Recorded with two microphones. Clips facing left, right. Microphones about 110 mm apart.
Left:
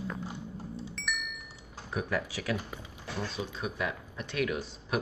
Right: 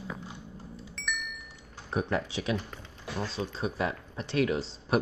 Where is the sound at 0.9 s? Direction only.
Centre (ahead or behind).